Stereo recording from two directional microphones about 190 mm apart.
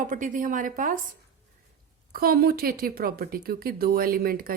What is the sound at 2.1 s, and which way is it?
Speech, 50° right (ahead or behind).